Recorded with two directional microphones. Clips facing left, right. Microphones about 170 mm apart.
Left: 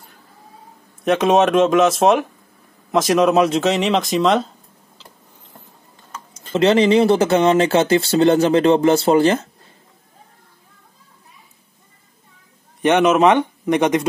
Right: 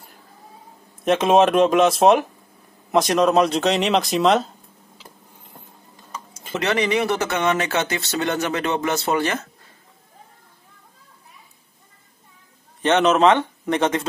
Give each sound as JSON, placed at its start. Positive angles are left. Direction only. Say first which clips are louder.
{"t": 1.0, "sound": "speech", "louder": "left 1 dB", "side_deg": 0}
{"t": 6.1, "sound": "tick-tock", "louder": "right 1 dB", "side_deg": -10}
{"t": 6.5, "sound": "speech", "louder": "left 8 dB", "side_deg": 25}
{"t": 12.8, "sound": "speech", "louder": "left 2 dB", "side_deg": 10}